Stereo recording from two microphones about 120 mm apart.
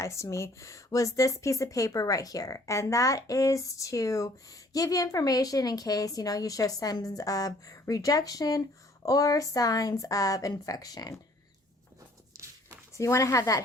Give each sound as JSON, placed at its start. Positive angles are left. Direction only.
{"t": 0.0, "sound": "speech", "side_deg": 25}
{"t": 12.9, "sound": "speech", "side_deg": 25}